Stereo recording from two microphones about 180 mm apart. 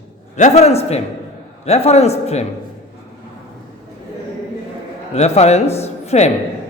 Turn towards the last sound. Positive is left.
turn(degrees=35)  # may be behind; listen again after turning